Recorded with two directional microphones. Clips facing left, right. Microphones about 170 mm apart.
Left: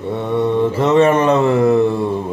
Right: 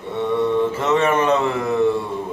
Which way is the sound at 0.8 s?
35° left (ahead or behind).